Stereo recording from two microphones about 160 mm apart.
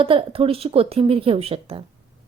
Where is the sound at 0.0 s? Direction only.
35° right (ahead or behind).